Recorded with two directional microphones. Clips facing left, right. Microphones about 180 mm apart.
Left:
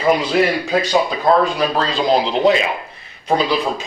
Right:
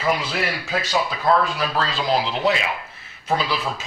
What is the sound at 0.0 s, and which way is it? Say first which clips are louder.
Speech: left 8 dB; 20° left (ahead or behind).